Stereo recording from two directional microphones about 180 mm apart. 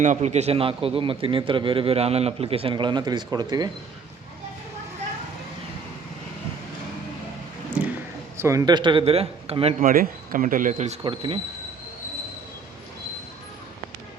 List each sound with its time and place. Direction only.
0.0 s a man's voice: 40° right (ahead or behind); by 3.7 s 20° right (ahead or behind)
7.8 s a sound: 5° right (ahead or behind)
8.4 s speech: 15° right (ahead or behind); by 9.9 s 35° right (ahead or behind)
9.9 s speech: 50° right (ahead or behind)
11.0 s speech: 30° right (ahead or behind)